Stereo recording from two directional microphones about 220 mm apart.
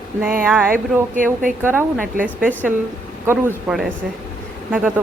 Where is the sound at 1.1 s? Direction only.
35° right (ahead or behind).